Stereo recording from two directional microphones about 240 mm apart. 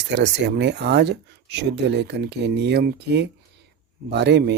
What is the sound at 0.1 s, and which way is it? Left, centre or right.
Speech, right.